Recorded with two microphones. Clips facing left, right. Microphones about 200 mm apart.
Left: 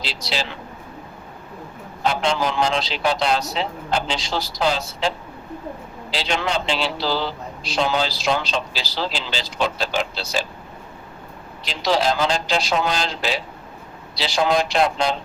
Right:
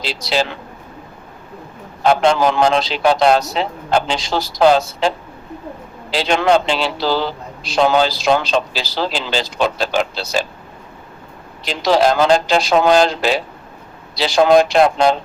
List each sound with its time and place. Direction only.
0.0 s a man's voice: 50° right (ahead or behind)
2.0 s a man's voice: 55° right (ahead or behind)
11.6 s a man's voice: 50° right (ahead or behind)